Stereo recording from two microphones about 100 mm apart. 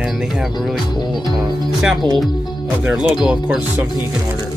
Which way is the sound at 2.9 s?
5° right (ahead or behind).